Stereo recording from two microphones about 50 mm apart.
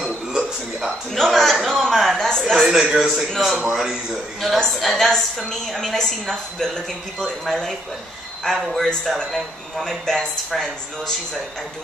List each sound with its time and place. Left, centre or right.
0.0 s music: centre
1.1 s a sound: centre
2.7 s a man's voice: centre
4.7 s a woman's voice: centre
8.7 s a woman's voice: centre